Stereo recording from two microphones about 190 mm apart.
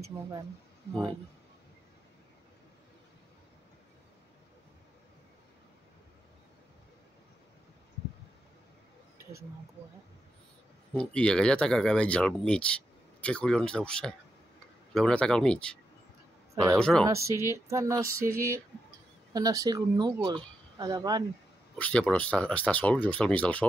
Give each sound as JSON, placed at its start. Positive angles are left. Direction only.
{"t": 11.0, "sound": "speech", "side_deg": 5}
{"t": 17.0, "sound": "speech", "side_deg": -15}
{"t": 18.0, "sound": "a sound", "side_deg": -50}
{"t": 19.3, "sound": "speech", "side_deg": -20}
{"t": 21.7, "sound": "speech", "side_deg": 5}